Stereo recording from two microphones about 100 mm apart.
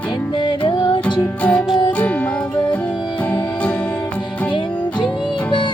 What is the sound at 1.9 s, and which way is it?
Music, 15° left (ahead or behind).